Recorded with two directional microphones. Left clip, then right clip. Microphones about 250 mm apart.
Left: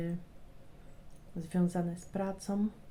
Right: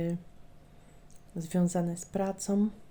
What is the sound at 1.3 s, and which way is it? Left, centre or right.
Speech, right.